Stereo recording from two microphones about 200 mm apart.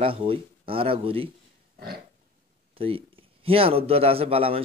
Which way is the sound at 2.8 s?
30° right (ahead or behind).